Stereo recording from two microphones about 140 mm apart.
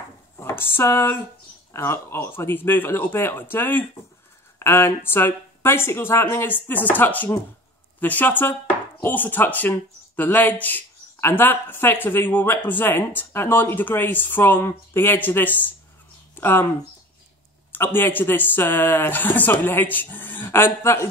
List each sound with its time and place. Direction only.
0.4 s a sound: 15° left (ahead or behind)
1.7 s speech: 15° left (ahead or behind)
17.7 s speech: 15° left (ahead or behind)